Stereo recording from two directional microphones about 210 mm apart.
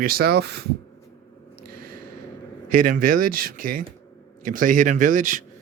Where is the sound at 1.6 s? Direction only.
45° right (ahead or behind).